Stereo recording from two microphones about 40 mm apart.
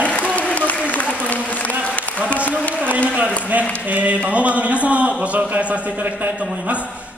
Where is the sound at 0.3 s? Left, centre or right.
Left.